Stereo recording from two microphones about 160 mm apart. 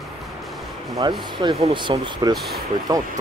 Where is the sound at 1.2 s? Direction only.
35° right (ahead or behind).